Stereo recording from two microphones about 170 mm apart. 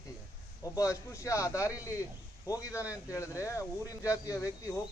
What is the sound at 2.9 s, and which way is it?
Speech, 20° left (ahead or behind).